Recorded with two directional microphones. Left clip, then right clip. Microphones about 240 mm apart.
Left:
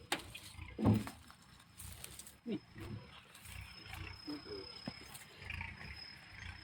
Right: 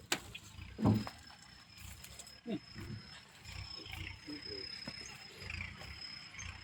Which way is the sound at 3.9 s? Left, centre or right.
Right.